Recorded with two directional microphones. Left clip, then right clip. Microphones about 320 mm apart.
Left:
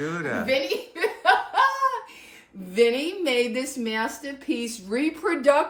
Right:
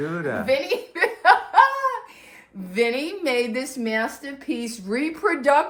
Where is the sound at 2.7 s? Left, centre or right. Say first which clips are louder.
Left 2 dB; centre.